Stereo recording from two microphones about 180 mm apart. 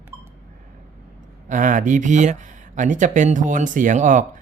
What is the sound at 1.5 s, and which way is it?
Speech, 45° right (ahead or behind).